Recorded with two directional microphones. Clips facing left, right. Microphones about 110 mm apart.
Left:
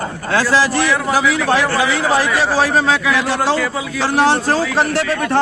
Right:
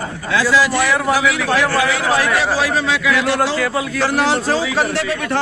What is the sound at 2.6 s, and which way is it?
Speech, 40° left (ahead or behind).